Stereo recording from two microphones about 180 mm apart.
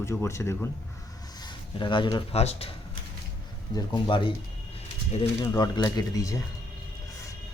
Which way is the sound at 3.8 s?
25° left (ahead or behind).